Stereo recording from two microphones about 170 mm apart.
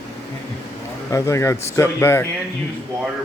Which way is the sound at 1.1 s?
15° left (ahead or behind).